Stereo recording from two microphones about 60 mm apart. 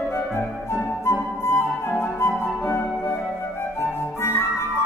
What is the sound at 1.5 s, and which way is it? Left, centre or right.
Flute, left.